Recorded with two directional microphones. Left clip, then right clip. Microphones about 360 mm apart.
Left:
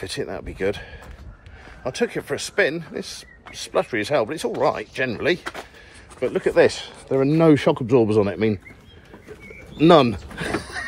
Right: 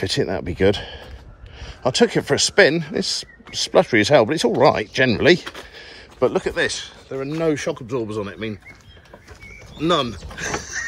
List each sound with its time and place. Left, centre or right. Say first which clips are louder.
0.0 s speech: right 7 dB; right
5.4 s speech: left 1 dB; centre
5.8 s a sound: right 9 dB; centre
6.4 s speech: left 5 dB; centre
9.8 s speech: left 6 dB; centre